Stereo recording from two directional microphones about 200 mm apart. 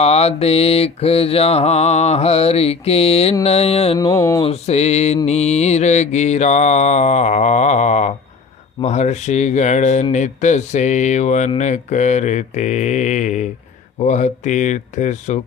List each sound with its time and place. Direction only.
0.0 s speech: 30° left (ahead or behind)
3.9 s mantra: 15° left (ahead or behind)
4.4 s speech: 30° left (ahead or behind)